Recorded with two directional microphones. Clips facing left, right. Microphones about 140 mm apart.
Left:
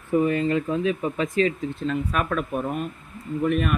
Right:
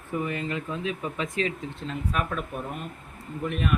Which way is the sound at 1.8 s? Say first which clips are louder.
Left 5 dB; 65° left (ahead or behind).